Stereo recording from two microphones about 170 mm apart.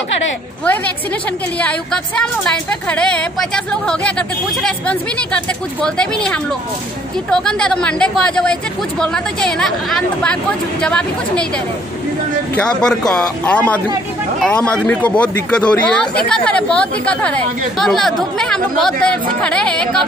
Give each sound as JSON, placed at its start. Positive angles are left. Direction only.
{"t": 1.6, "sound": "speech", "side_deg": 5}
{"t": 12.5, "sound": "speech", "side_deg": 5}
{"t": 15.0, "sound": "speech", "side_deg": 5}